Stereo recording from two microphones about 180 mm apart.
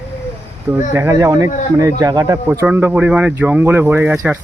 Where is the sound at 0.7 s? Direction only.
15° right (ahead or behind).